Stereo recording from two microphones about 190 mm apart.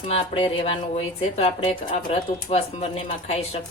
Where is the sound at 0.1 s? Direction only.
25° left (ahead or behind).